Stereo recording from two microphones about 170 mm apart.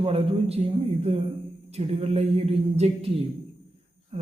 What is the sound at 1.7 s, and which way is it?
Speech, 40° right (ahead or behind).